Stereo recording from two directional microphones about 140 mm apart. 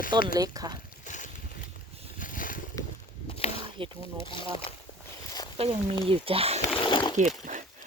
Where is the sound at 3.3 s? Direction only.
45° left (ahead or behind).